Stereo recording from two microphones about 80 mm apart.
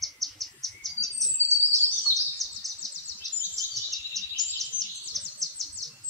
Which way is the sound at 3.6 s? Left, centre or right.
Right.